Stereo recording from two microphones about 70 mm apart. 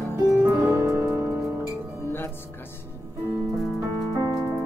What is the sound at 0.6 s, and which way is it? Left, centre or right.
Music, right.